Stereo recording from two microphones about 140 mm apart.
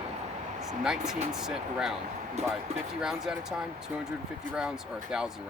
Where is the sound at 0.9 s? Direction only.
5° right (ahead or behind).